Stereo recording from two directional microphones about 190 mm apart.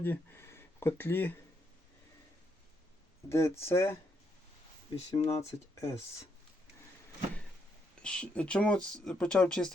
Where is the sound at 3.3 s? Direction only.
15° left (ahead or behind).